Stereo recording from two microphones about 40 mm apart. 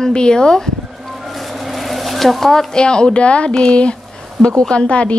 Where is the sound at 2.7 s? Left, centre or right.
Left.